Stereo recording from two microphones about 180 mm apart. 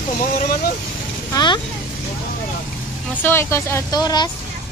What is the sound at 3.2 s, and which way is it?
Speech, 15° left (ahead or behind).